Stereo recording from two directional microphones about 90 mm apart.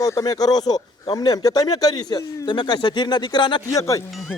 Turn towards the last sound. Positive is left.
turn(degrees=40)  # may be behind; listen again after turning